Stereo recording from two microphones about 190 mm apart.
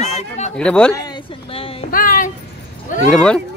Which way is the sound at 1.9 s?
50° left (ahead or behind).